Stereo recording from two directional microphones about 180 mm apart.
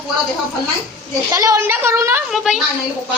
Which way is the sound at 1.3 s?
15° right (ahead or behind).